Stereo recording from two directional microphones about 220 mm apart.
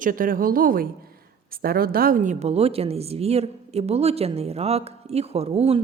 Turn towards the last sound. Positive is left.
turn(degrees=-25)  # may be behind; listen again after turning